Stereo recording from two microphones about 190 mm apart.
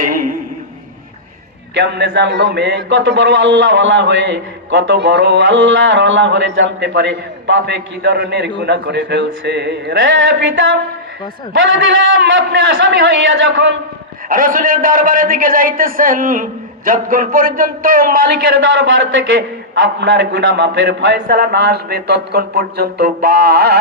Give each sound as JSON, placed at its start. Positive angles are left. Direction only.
{"t": 0.0, "sound": "a sound", "side_deg": -45}
{"t": 1.7, "sound": "a man's voice", "side_deg": -65}
{"t": 14.3, "sound": "a man's voice", "side_deg": -45}